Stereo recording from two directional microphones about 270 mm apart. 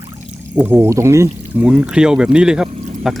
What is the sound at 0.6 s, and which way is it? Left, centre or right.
Speech, centre.